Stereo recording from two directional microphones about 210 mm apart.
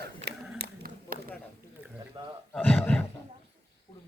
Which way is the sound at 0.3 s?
50° right (ahead or behind).